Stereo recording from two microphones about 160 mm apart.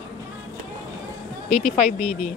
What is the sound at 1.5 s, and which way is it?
Speech, 40° left (ahead or behind).